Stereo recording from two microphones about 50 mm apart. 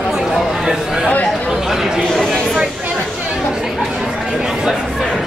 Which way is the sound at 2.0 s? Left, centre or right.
Centre.